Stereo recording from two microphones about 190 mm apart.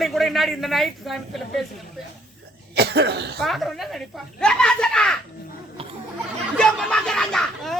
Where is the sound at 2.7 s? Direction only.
60° right (ahead or behind).